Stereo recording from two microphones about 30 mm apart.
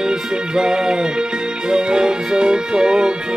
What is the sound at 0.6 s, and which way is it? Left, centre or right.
Music, right.